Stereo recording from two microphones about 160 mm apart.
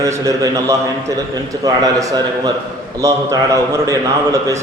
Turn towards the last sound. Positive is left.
turn(degrees=-20)  # may be behind; listen again after turning